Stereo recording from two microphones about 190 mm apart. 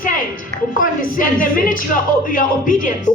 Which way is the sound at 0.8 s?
45° left (ahead or behind).